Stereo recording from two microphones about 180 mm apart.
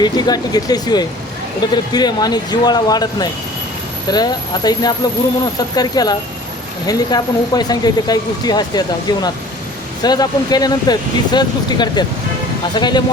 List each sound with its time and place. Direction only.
0.0 s speech: 20° left (ahead or behind)